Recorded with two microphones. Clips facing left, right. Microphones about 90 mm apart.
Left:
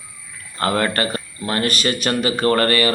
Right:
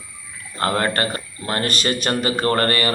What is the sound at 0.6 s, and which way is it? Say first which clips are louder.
Speech: left 1 dB; 30° right (ahead or behind).